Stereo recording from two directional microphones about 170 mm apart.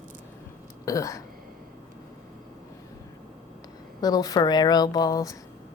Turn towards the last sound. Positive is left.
turn(degrees=20)  # may be behind; listen again after turning